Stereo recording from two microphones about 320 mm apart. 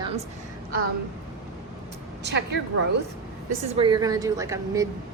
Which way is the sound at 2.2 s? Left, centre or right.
Right.